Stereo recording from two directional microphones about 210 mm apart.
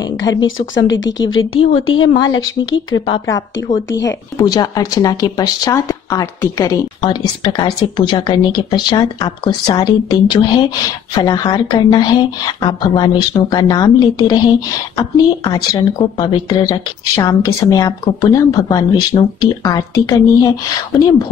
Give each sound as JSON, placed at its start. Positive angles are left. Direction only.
{"t": 0.0, "sound": "a sound", "side_deg": 15}
{"t": 0.8, "sound": "a woman's voice", "side_deg": 60}
{"t": 3.1, "sound": "speech", "side_deg": 15}